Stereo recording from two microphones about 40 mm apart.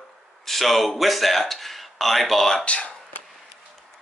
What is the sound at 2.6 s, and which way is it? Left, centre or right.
Speech, left.